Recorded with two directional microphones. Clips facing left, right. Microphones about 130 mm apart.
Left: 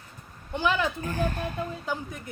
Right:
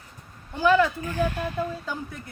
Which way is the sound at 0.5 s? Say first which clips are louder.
Right 6 dB; 20° left (ahead or behind).